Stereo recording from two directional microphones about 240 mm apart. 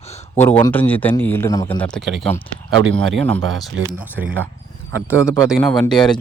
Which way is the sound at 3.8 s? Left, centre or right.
Right.